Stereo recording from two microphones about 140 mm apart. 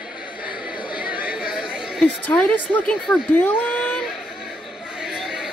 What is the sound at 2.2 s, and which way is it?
Speech, 10° left (ahead or behind).